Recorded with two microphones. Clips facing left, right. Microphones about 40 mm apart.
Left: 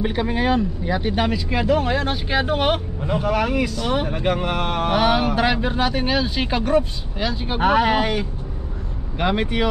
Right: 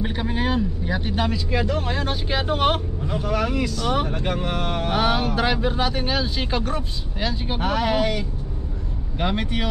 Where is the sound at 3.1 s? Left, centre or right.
Left.